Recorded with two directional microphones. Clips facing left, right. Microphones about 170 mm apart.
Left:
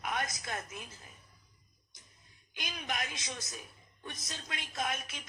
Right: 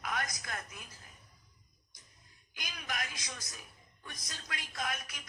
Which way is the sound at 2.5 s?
20° left (ahead or behind).